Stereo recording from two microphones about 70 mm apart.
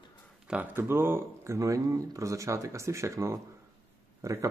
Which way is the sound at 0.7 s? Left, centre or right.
Right.